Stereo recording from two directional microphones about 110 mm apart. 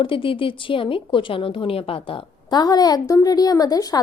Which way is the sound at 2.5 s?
35° left (ahead or behind).